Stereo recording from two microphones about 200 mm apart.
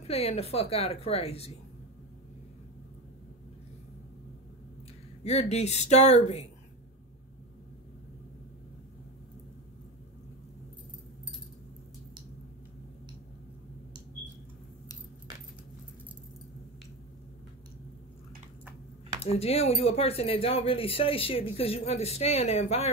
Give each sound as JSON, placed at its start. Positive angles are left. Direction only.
{"t": 0.0, "sound": "a woman's voice", "side_deg": 30}
{"t": 5.2, "sound": "a woman's voice", "side_deg": 35}
{"t": 19.3, "sound": "speech", "side_deg": 30}